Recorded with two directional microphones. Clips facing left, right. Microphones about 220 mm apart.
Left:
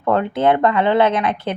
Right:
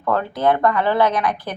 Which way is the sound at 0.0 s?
25° left (ahead or behind).